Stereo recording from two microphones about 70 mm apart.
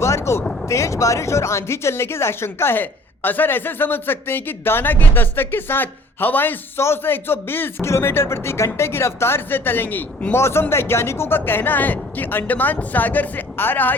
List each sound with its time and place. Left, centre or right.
0.0 s a woman's voice: left